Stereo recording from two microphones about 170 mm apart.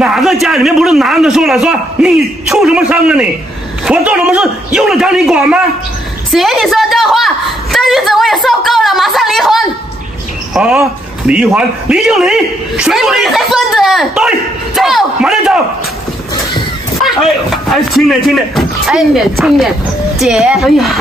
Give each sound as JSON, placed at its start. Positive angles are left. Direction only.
{"t": 0.0, "sound": "a man's voice", "side_deg": -5}
{"t": 6.3, "sound": "a sound", "side_deg": 0}
{"t": 10.5, "sound": "a man's voice", "side_deg": -5}
{"t": 17.6, "sound": "a man's voice", "side_deg": 0}